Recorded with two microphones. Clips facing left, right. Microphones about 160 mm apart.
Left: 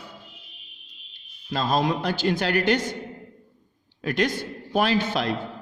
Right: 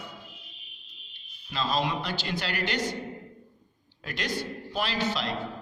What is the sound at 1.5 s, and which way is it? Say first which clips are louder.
A man's voice: left 5 dB; 45° left (ahead or behind).